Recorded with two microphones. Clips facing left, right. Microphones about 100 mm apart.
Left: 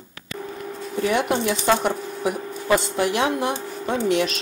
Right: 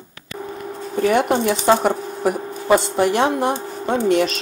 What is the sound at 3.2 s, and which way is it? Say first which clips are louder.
Speech: right 4 dB; 40° right (ahead or behind).